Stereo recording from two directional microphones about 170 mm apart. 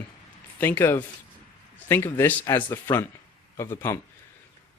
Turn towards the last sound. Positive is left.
turn(degrees=15)  # may be behind; listen again after turning